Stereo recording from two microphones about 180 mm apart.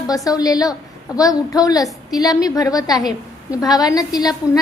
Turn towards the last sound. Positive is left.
turn(degrees=20)  # may be behind; listen again after turning